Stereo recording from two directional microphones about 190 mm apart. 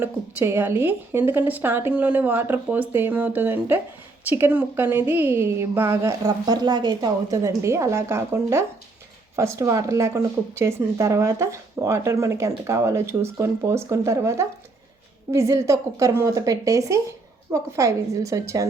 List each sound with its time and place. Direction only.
0.0 s speech: 10° right (ahead or behind)